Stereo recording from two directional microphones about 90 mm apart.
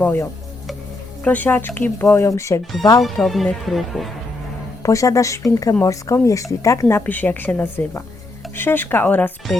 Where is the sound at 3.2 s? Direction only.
Centre (ahead or behind).